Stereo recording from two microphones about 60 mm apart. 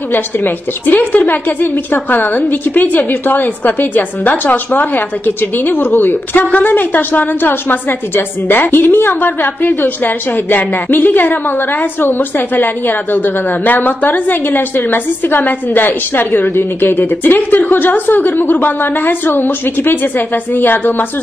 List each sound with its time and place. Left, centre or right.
0.8 s a woman's voice: left